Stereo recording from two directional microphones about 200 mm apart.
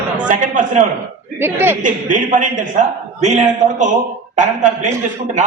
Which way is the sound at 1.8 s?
40° right (ahead or behind).